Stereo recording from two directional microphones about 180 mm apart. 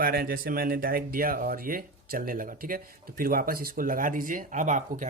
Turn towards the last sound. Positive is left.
turn(degrees=-45)  # may be behind; listen again after turning